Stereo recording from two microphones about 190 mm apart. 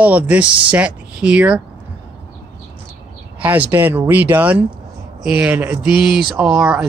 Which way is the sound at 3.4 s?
10° right (ahead or behind).